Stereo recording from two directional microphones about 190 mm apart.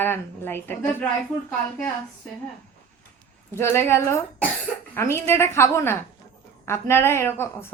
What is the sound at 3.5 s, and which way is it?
A child's voice, 15° left (ahead or behind).